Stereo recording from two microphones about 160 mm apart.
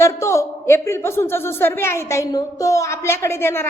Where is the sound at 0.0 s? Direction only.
20° left (ahead or behind).